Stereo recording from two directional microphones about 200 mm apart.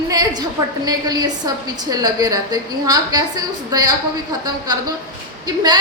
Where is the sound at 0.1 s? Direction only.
20° right (ahead or behind).